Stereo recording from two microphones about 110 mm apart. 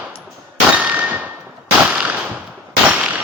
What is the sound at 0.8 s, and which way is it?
Clang, 15° right (ahead or behind).